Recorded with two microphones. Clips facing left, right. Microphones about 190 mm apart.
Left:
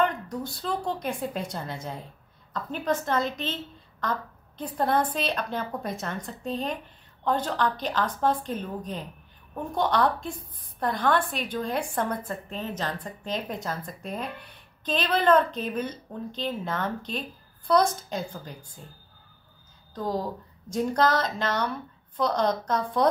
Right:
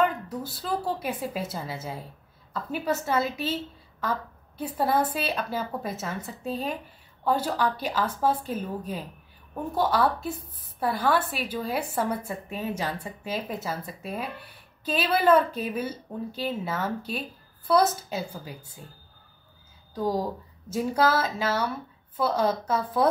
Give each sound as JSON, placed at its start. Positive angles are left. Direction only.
{"t": 0.0, "sound": "a woman's voice", "side_deg": -5}
{"t": 19.9, "sound": "a woman's voice", "side_deg": -10}